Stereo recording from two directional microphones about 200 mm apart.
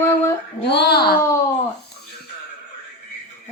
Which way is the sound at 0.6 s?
55° left (ahead or behind).